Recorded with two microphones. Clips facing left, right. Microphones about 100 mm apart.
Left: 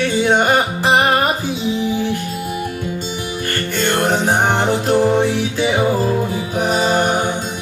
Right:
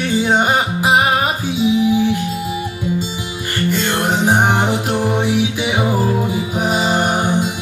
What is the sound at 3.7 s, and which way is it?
Music, 10° right (ahead or behind).